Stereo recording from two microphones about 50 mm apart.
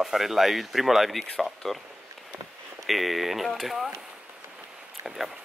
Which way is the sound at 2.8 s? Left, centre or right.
Centre.